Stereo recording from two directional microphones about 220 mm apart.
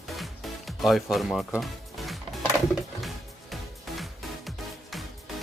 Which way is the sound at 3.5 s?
Centre (ahead or behind).